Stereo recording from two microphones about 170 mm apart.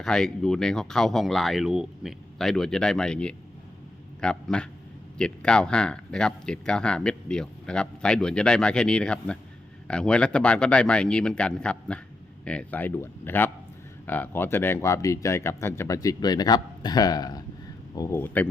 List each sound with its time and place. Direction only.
0.0 s speech: 5° left (ahead or behind)